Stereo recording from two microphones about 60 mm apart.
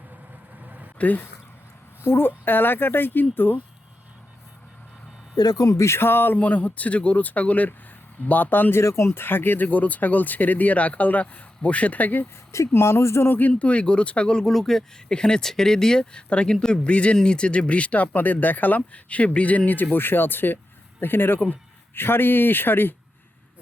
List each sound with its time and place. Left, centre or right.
0.6 s vehicle: right
0.9 s speech: left
2.0 s speech: left
5.4 s speech: left
8.8 s speech: left
9.0 s speech: left
12.7 s speech: left
13.6 s speech: left